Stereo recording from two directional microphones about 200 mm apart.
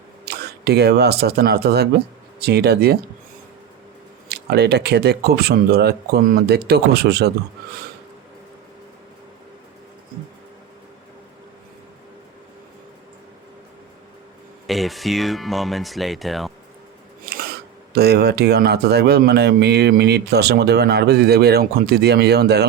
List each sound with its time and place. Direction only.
0.3 s speech: 55° right (ahead or behind)
4.3 s speech: 55° right (ahead or behind)
14.7 s speech: centre (ahead or behind)
17.3 s scissors: 50° right (ahead or behind)
17.9 s speech: 55° right (ahead or behind)